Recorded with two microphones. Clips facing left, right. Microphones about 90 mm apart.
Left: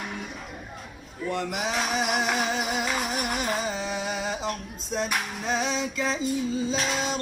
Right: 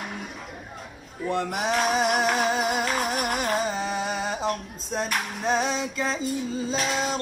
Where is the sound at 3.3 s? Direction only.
40° right (ahead or behind).